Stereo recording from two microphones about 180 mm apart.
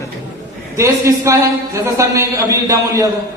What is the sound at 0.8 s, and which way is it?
A man's voice, 15° right (ahead or behind).